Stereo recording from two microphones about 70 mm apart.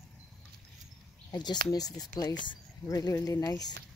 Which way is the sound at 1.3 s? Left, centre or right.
Left.